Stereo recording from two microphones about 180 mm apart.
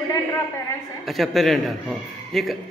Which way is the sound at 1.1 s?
Centre (ahead or behind).